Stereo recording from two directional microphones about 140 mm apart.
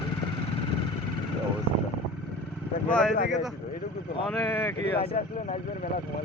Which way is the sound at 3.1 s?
75° left (ahead or behind).